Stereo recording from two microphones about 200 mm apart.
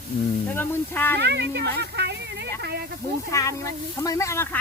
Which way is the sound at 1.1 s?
55° right (ahead or behind).